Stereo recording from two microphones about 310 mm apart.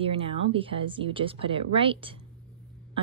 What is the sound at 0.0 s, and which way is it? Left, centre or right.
A woman's voice, centre.